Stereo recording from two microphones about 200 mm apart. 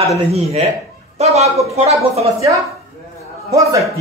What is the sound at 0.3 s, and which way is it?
A man's voice, 30° right (ahead or behind).